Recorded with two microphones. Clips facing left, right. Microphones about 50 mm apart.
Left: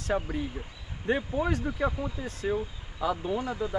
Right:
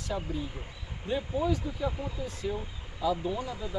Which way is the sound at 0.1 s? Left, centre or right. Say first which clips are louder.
Left 3 dB; left.